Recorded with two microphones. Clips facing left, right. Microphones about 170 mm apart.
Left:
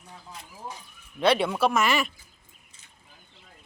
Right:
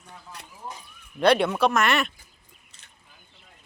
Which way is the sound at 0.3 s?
70° right (ahead or behind).